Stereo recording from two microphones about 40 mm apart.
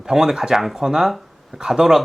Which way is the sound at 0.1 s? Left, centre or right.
Centre.